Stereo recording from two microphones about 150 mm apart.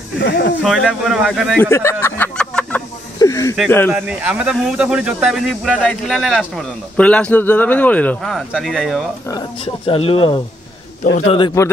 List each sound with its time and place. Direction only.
0.3 s speech: 90° left
0.6 s speech: centre (ahead or behind)
1.6 s a sound: 20° left (ahead or behind)
3.2 s a sound: 20° left (ahead or behind)
3.9 s speech: 5° right (ahead or behind)
9.8 s speech: 40° left (ahead or behind)
11.0 s a man's voice: 60° left (ahead or behind)
11.6 s a man's voice: 20° left (ahead or behind)